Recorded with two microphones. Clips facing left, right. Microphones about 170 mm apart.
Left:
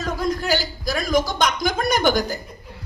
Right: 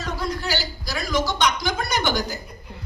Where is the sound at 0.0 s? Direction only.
45° left (ahead or behind).